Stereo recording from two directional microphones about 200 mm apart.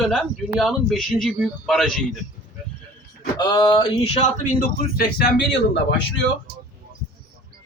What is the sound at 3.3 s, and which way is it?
Speech, 20° left (ahead or behind).